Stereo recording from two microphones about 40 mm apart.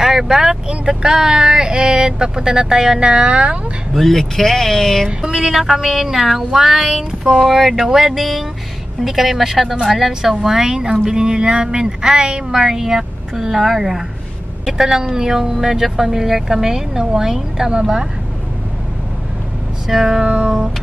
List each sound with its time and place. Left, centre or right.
0.0 s speech: centre
3.0 s speech: right
3.9 s speech: centre
5.0 s speech: centre
19.9 s speech: centre
20.2 s music: right